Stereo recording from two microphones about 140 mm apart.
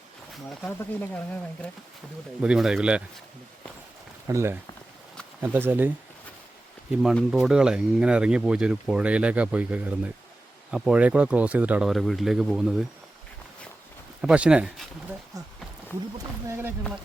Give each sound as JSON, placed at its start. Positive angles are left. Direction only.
{"t": 0.6, "sound": "speech", "side_deg": 10}
{"t": 2.4, "sound": "speech", "side_deg": -5}
{"t": 4.3, "sound": "speech", "side_deg": -20}
{"t": 5.5, "sound": "speech", "side_deg": -15}
{"t": 6.9, "sound": "speech", "side_deg": 0}
{"t": 14.2, "sound": "speech", "side_deg": -5}
{"t": 16.5, "sound": "speech", "side_deg": -15}